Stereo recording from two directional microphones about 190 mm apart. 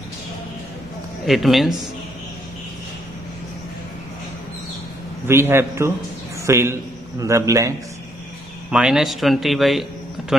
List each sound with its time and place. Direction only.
1.2 s speech: centre (ahead or behind)
5.2 s a man's voice: 15° right (ahead or behind)
8.6 s speech: 5° right (ahead or behind)